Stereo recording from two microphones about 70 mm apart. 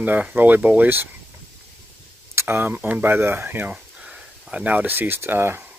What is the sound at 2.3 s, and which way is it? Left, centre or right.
Speech, right.